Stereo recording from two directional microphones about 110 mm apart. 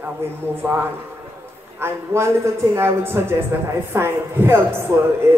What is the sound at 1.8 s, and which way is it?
A man's voice, 25° right (ahead or behind).